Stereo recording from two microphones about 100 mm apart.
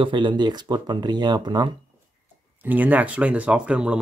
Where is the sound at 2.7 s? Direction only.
15° right (ahead or behind).